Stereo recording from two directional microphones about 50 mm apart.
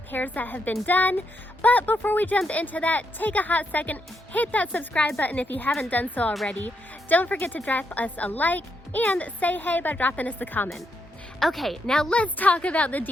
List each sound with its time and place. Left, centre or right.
0.1 s speech: left
11.3 s a woman's voice: centre
11.9 s speech: centre
12.1 s a woman's voice: left